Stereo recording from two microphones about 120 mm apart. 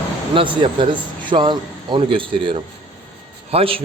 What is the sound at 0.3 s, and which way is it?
A man's voice, 45° right (ahead or behind).